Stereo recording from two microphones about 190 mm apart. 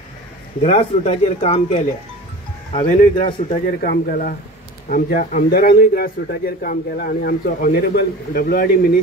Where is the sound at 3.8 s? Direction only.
50° left (ahead or behind).